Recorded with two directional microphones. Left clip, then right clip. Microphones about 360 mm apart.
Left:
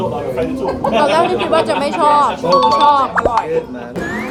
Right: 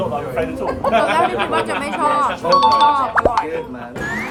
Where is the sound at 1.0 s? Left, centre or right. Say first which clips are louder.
Left 3 dB; centre.